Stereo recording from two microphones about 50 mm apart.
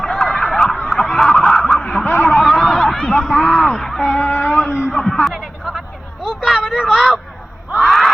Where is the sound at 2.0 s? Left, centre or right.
Left.